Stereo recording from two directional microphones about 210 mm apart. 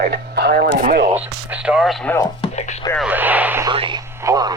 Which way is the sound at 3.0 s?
10° right (ahead or behind).